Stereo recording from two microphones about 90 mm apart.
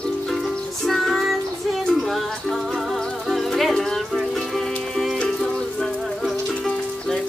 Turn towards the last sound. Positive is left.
turn(degrees=5)  # may be behind; listen again after turning